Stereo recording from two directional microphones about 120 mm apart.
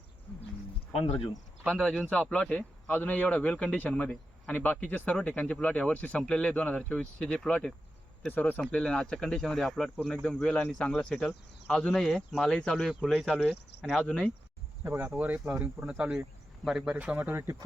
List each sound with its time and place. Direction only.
0.9 s speech: 55° left (ahead or behind)
1.6 s speech: centre (ahead or behind)
14.0 s speech: 10° left (ahead or behind)
14.8 s speech: 20° right (ahead or behind)